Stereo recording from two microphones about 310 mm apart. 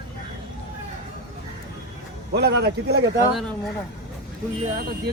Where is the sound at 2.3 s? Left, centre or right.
Right.